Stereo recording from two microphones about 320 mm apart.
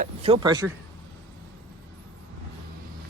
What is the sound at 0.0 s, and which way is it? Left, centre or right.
Speech, centre.